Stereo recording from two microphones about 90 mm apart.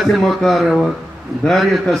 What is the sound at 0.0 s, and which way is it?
A man's voice, centre (ahead or behind).